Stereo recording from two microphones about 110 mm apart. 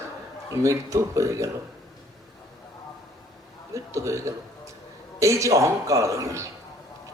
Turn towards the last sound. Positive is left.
turn(degrees=-30)  # may be behind; listen again after turning